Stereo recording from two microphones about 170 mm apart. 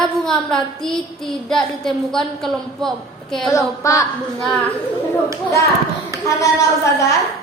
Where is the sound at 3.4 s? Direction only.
20° left (ahead or behind).